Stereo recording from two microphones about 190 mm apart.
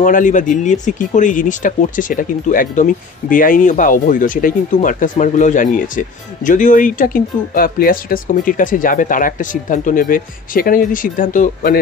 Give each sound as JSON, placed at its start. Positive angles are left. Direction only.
{"t": 0.0, "sound": "speech", "side_deg": 40}